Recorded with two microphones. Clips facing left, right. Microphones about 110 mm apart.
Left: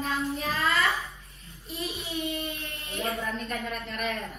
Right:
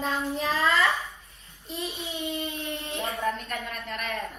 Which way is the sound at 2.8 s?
30° right (ahead or behind).